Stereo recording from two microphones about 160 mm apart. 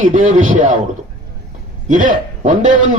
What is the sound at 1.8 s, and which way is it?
Speech, 55° right (ahead or behind).